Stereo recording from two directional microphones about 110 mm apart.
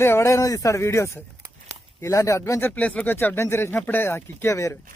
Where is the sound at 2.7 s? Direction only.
10° left (ahead or behind).